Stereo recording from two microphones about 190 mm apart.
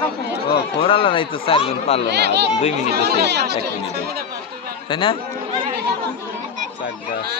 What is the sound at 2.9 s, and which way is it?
Speech, 60° right (ahead or behind).